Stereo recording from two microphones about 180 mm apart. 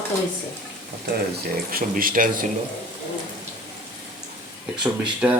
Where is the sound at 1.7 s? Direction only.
50° right (ahead or behind).